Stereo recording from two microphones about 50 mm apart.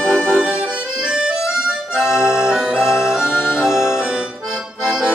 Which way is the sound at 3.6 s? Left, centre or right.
Centre.